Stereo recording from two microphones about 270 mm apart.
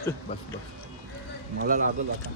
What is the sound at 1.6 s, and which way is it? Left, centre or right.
Speech, right.